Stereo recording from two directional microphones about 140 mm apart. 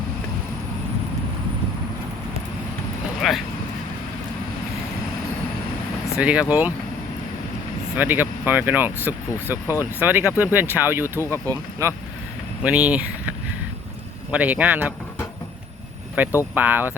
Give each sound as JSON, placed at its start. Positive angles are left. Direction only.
{"t": 3.2, "sound": "vehicle", "side_deg": 0}
{"t": 6.1, "sound": "speech", "side_deg": -10}
{"t": 7.9, "sound": "speech", "side_deg": -15}
{"t": 14.3, "sound": "speech", "side_deg": -10}
{"t": 16.6, "sound": "speech", "side_deg": -10}